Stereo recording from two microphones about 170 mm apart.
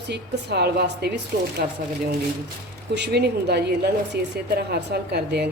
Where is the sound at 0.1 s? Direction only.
70° right (ahead or behind).